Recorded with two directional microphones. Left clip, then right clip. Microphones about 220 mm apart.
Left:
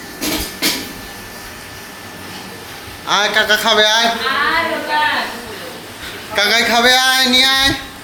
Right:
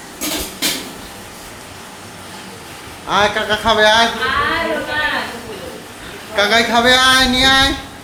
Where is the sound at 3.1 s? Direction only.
25° left (ahead or behind).